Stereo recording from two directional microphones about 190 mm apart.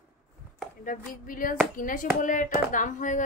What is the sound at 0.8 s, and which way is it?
A woman's voice, 45° left (ahead or behind).